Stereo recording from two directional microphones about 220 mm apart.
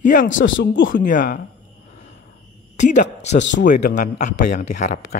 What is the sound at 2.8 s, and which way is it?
Speech, 35° left (ahead or behind).